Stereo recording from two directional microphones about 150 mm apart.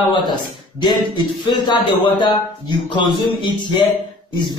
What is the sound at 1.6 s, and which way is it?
Speech, 30° left (ahead or behind).